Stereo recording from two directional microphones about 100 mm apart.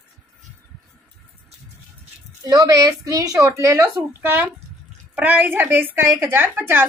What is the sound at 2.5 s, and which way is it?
A woman's voice, 35° right (ahead or behind).